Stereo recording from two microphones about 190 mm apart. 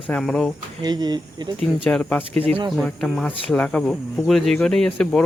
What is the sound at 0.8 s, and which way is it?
Speech, 20° right (ahead or behind).